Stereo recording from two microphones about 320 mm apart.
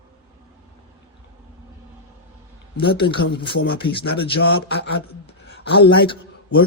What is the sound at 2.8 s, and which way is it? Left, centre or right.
Speech, left.